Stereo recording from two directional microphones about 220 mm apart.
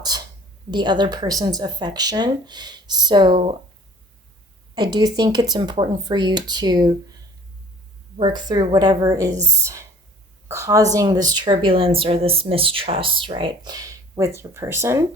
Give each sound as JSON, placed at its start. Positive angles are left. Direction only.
{"t": 0.1, "sound": "a sound", "side_deg": -15}
{"t": 0.7, "sound": "speech", "side_deg": -20}
{"t": 4.7, "sound": "speech", "side_deg": -20}
{"t": 8.2, "sound": "a woman's voice", "side_deg": -20}
{"t": 10.5, "sound": "a woman's voice", "side_deg": -15}